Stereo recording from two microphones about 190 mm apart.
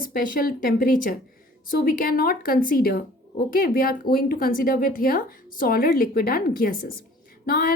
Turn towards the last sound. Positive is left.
turn(degrees=50)  # may be behind; listen again after turning